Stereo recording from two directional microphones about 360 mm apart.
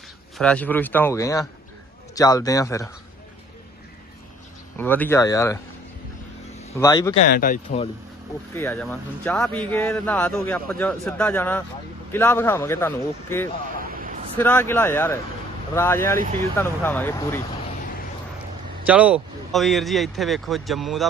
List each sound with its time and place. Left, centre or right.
0.3 s a man's voice: centre
4.8 s a man's voice: centre
6.6 s speech: centre
7.3 s speech: left
8.5 s a man's voice: centre
13.7 s a sound: right
14.3 s a man's voice: centre
18.9 s speech: centre